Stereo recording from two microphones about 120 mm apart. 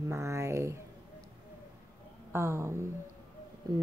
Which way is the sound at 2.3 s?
25° right (ahead or behind).